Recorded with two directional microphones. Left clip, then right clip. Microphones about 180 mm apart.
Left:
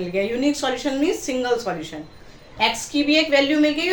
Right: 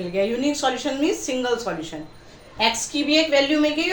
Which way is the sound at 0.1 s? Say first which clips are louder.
Even; 15° left (ahead or behind).